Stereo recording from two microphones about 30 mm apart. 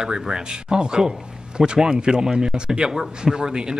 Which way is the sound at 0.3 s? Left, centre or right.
Right.